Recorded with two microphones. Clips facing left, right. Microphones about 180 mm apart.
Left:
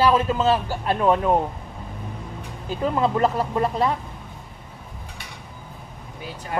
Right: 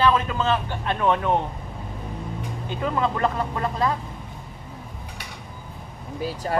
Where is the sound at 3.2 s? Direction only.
5° left (ahead or behind).